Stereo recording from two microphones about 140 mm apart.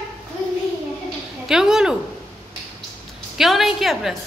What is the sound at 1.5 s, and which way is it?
Speech, 5° right (ahead or behind).